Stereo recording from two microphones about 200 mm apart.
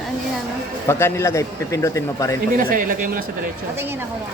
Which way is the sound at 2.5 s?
45° right (ahead or behind).